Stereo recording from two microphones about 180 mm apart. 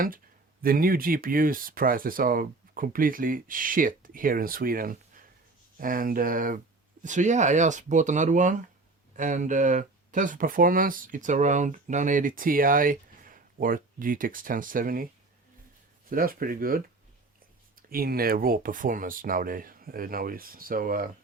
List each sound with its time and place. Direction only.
0.6 s speech: 55° right (ahead or behind)